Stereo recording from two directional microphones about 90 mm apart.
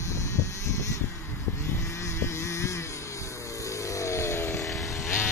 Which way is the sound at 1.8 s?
30° left (ahead or behind).